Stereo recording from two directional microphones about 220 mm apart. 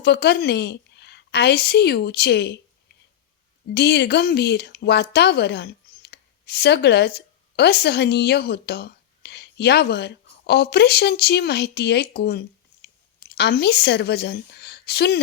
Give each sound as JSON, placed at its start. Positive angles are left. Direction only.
{"t": 0.0, "sound": "a woman's voice", "side_deg": 50}
{"t": 3.8, "sound": "speech", "side_deg": 50}